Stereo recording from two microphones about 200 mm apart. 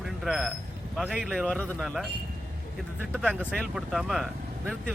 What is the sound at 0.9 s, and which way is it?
Speech, centre (ahead or behind).